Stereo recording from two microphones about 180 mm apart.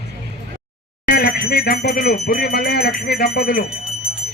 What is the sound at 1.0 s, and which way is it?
Speech, 55° left (ahead or behind).